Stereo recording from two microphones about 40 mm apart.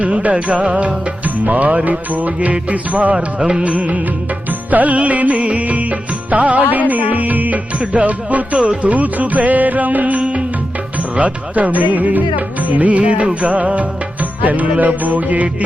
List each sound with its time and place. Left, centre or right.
0.0 s music: right